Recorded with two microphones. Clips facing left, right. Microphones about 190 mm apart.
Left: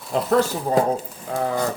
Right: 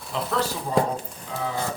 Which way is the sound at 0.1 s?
45° left (ahead or behind).